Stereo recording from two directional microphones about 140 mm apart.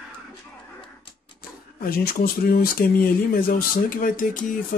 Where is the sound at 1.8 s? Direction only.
90° left.